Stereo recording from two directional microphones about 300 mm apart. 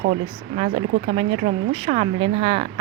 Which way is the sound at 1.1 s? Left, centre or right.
Centre.